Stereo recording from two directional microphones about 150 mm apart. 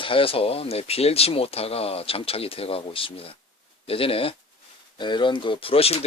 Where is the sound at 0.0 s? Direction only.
35° left (ahead or behind).